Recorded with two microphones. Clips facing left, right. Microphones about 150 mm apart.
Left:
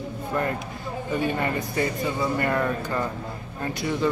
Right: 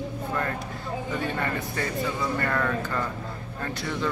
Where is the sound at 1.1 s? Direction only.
15° left (ahead or behind).